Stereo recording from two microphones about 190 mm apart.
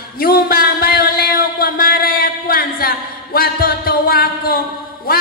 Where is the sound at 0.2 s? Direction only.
50° left (ahead or behind).